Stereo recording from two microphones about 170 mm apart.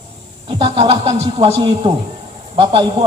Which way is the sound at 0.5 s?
35° right (ahead or behind).